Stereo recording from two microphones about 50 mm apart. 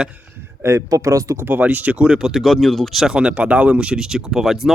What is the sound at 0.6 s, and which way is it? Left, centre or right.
Speech, right.